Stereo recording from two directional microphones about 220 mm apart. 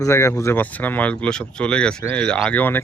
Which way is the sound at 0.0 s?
15° left (ahead or behind).